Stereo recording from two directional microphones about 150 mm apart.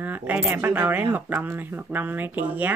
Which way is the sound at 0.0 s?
10° right (ahead or behind).